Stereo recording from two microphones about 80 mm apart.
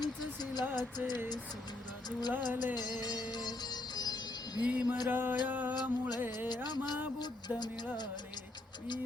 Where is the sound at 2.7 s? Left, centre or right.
Left.